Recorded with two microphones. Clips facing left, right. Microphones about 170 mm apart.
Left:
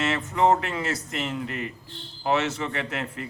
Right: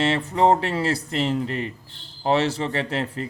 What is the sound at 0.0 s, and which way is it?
Speech, 30° right (ahead or behind).